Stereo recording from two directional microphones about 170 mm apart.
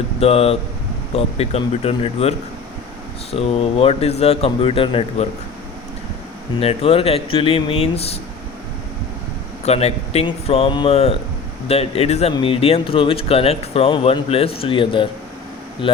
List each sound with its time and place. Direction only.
0.2 s speech: 35° left (ahead or behind)
3.3 s speech: 35° left (ahead or behind)
6.6 s speech: 35° left (ahead or behind)
9.6 s speech: 35° left (ahead or behind)